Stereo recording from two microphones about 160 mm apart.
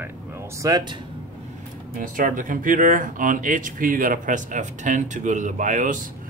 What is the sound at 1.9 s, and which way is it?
Speech, 55° right (ahead or behind).